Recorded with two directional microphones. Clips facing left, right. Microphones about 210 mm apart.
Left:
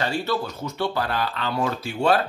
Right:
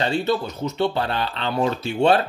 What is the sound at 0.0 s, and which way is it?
Speech, 20° right (ahead or behind).